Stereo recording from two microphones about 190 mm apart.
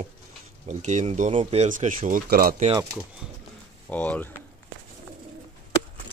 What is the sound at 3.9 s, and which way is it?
Speech, 5° left (ahead or behind).